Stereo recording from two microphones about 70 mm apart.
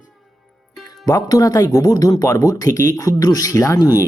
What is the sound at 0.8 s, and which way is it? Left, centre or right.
Speech, left.